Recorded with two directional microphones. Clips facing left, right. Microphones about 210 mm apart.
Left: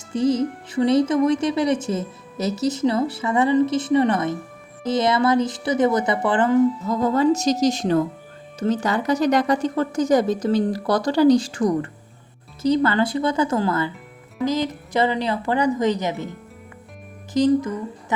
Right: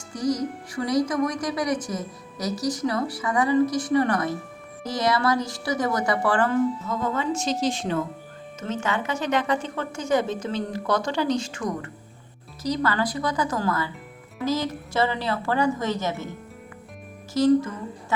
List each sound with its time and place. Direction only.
0.1 s speech: 25° left (ahead or behind)
6.8 s a woman's voice: 35° left (ahead or behind); by 16.2 s 15° left (ahead or behind)
17.3 s a woman's voice: 15° left (ahead or behind)